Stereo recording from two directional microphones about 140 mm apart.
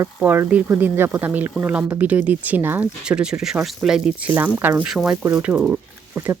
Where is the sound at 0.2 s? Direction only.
10° right (ahead or behind).